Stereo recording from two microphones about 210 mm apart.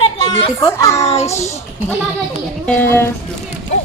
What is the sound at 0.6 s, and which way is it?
Speech, 15° left (ahead or behind).